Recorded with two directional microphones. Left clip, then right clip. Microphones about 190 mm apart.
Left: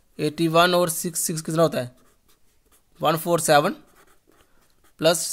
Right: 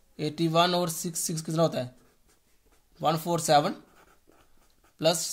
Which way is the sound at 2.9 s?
40° left (ahead or behind).